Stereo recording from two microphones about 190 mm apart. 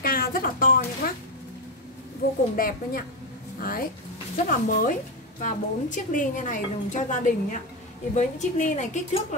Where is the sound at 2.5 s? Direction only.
50° left (ahead or behind).